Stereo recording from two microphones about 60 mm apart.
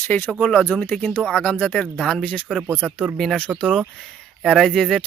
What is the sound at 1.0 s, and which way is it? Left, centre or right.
Speech, left.